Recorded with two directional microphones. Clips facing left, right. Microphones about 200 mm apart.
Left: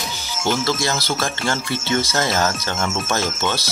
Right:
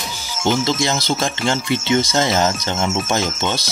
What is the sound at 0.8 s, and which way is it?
Speech, 20° right (ahead or behind).